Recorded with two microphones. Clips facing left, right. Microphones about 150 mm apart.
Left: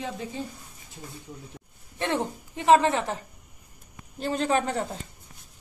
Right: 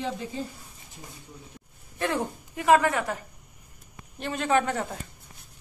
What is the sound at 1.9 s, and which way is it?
A woman's voice, 25° left (ahead or behind).